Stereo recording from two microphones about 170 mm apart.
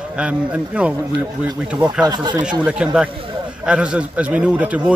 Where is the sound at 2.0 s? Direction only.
25° right (ahead or behind).